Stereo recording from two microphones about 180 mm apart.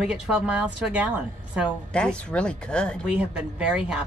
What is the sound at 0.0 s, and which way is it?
A woman's voice, 5° right (ahead or behind).